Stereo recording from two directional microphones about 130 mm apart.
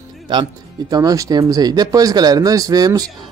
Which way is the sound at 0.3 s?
35° right (ahead or behind).